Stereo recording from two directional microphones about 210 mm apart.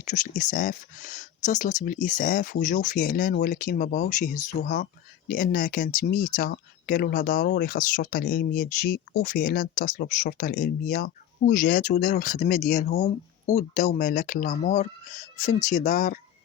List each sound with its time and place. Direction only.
0.1 s speech: 40° left (ahead or behind)